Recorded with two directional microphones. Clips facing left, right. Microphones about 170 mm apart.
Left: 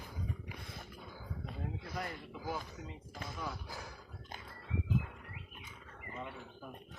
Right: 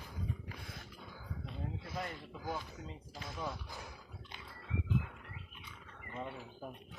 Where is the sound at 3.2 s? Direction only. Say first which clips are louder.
Right 1 dB; centre (ahead or behind).